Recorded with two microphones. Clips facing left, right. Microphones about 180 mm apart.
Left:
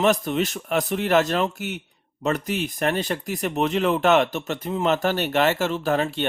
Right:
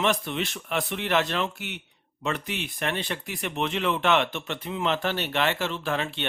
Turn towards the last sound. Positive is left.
turn(degrees=40)  # may be behind; listen again after turning